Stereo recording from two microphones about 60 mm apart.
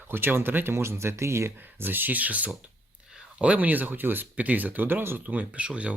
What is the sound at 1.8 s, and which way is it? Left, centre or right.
Speech, right.